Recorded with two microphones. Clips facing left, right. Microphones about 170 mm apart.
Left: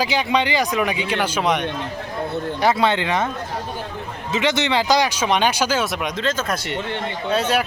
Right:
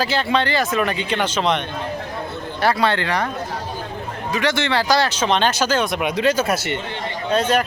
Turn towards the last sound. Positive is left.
turn(degrees=10)  # may be behind; listen again after turning